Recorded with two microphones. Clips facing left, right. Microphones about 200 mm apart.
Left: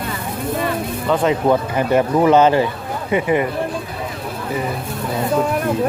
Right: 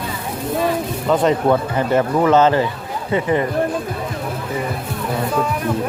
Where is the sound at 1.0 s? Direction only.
Centre (ahead or behind).